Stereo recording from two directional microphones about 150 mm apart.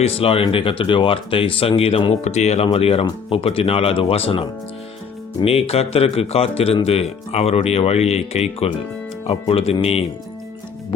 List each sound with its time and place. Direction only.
0.0 s speech: 40° left (ahead or behind)